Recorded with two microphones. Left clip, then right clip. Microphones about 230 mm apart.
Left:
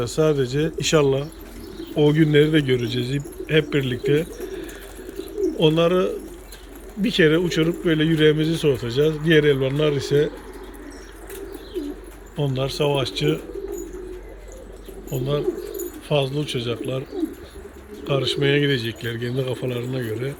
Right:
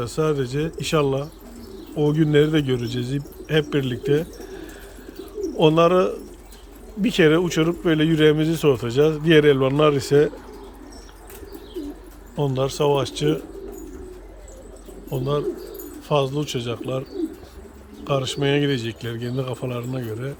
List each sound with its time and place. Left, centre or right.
0.0 s a man's voice: centre
12.4 s speech: centre
15.1 s speech: centre
18.0 s speech: centre